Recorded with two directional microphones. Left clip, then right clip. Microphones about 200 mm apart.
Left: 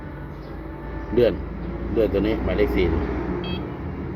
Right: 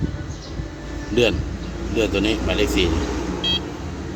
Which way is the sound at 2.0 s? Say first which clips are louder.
Right 1 dB; 30° right (ahead or behind).